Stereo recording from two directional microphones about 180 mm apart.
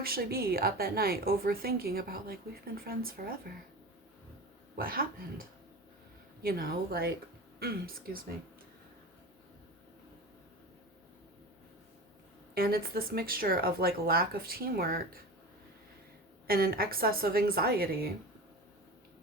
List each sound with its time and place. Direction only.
0.0 s a woman's voice: 55° right (ahead or behind)
4.8 s a woman's voice: 55° right (ahead or behind)
12.5 s a woman's voice: 60° right (ahead or behind)
16.5 s a woman's voice: 55° right (ahead or behind)